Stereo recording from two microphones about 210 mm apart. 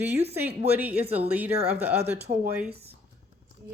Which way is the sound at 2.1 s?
50° right (ahead or behind).